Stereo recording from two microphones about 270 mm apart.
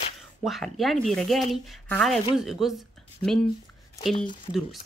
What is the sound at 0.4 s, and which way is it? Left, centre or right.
Speech, centre.